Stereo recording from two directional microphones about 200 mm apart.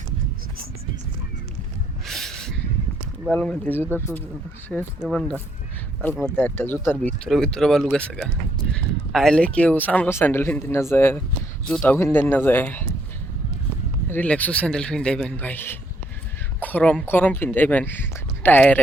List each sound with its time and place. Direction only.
2.0 s a sound: centre (ahead or behind)
3.2 s speech: 5° left (ahead or behind)
4.7 s speech: centre (ahead or behind)
14.1 s speech: 10° left (ahead or behind)